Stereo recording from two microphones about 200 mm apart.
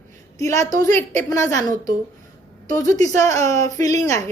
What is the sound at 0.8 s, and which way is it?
Speech, 35° right (ahead or behind).